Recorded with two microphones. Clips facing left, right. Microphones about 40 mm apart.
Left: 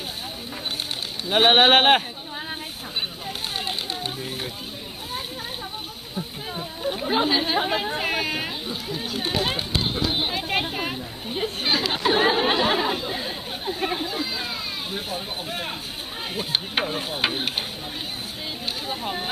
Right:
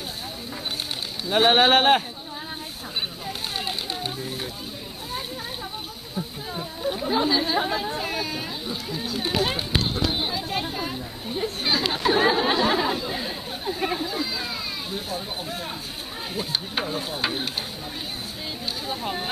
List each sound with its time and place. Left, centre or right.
1.3 s speech: left
3.3 s a sound: centre
6.1 s a sound: centre
7.1 s speech: left
8.6 s speech: centre
9.9 s speech: left
10.3 s chatter: left
11.4 s speech: left
14.1 s children playing: centre
14.9 s speech: left
16.8 s stir: left
18.9 s speech: centre